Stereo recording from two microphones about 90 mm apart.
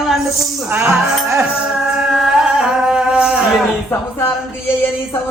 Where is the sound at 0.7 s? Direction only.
30° right (ahead or behind).